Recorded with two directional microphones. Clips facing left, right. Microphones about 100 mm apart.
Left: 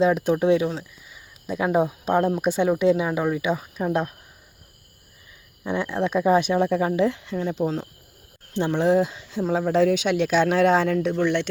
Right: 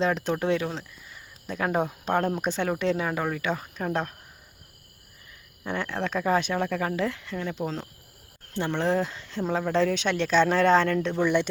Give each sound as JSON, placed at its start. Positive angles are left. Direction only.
{"t": 0.0, "sound": "speech", "side_deg": 10}
{"t": 5.6, "sound": "speech", "side_deg": 15}
{"t": 7.6, "sound": "speech", "side_deg": 10}
{"t": 11.1, "sound": "speech", "side_deg": -5}